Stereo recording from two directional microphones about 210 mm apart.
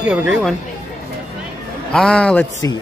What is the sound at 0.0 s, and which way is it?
Speech, 5° right (ahead or behind).